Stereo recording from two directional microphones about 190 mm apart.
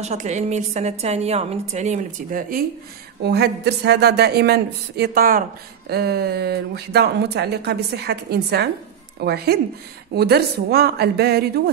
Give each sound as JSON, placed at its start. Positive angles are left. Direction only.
{"t": 0.0, "sound": "a woman's voice", "side_deg": -35}
{"t": 3.3, "sound": "speech", "side_deg": -60}